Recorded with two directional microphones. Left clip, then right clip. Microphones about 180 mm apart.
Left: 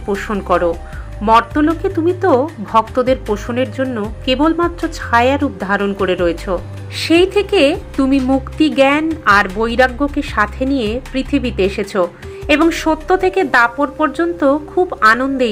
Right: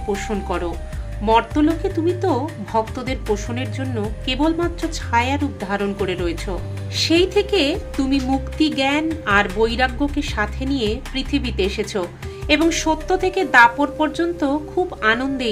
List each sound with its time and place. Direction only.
0.1 s a woman's voice: 5° left (ahead or behind)